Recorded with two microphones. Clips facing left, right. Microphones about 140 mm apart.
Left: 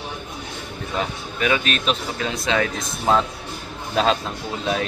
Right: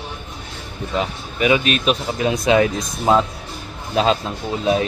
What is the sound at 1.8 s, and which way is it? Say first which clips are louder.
Speech: right 5 dB; 15° right (ahead or behind).